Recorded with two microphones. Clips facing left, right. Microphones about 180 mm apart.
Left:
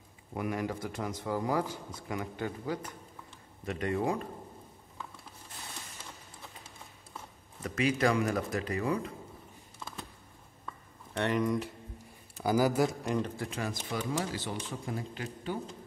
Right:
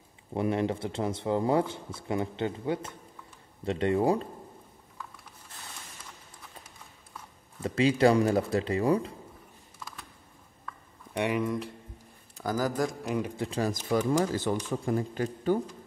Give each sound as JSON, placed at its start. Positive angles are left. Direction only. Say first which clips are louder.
{"t": 0.3, "sound": "speech", "louder": "right 6 dB", "side_deg": -25}
{"t": 7.6, "sound": "speech", "louder": "right 6 dB", "side_deg": -30}
{"t": 11.1, "sound": "speech", "louder": "right 1 dB", "side_deg": -10}
{"t": 12.4, "sound": "speech", "louder": "left 2 dB", "side_deg": 10}
{"t": 13.5, "sound": "speech", "louder": "right 8 dB", "side_deg": -40}